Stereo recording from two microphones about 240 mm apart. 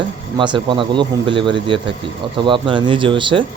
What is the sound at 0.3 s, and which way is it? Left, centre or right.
Speech, centre.